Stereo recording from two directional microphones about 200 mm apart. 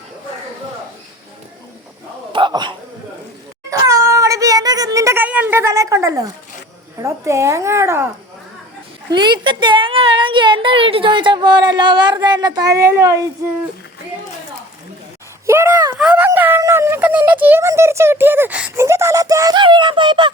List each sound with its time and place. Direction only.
2.3 s speech: 25° right (ahead or behind)
3.7 s a sound: 15° right (ahead or behind)
7.0 s speech: 15° right (ahead or behind)
9.1 s a woman's voice: 20° right (ahead or behind)
15.4 s a sound: 15° right (ahead or behind)
16.0 s speech: 5° right (ahead or behind); by 20.3 s 25° right (ahead or behind)